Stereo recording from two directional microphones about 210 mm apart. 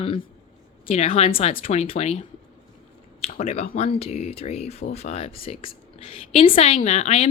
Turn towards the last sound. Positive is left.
turn(degrees=30)  # may be behind; listen again after turning